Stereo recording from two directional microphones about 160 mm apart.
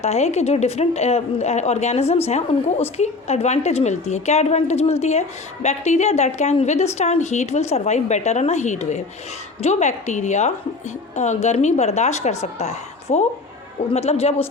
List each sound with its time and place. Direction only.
0.0 s a woman's voice: 40° left (ahead or behind)